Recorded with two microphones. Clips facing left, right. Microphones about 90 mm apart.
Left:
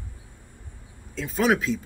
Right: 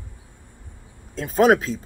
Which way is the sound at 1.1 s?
40° right (ahead or behind).